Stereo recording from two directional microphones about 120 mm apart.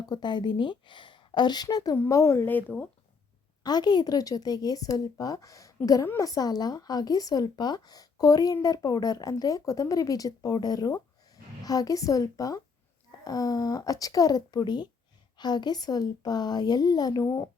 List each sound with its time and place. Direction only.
0.0 s a woman's voice: 35° left (ahead or behind); by 2.8 s 15° left (ahead or behind)
3.6 s speech: 35° left (ahead or behind)